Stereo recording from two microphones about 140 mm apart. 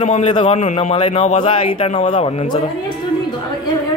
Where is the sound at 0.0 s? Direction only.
45° left (ahead or behind).